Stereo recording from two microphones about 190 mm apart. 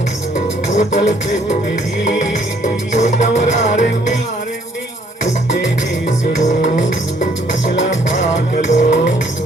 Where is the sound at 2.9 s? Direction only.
40° left (ahead or behind).